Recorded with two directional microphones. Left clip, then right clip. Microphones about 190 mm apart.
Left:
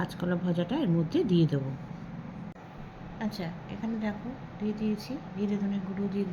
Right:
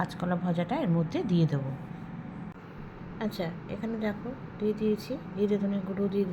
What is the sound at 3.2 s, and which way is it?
A woman's voice, 15° right (ahead or behind).